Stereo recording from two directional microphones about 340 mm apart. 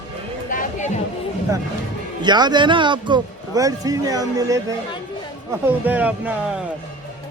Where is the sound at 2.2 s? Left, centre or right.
Centre.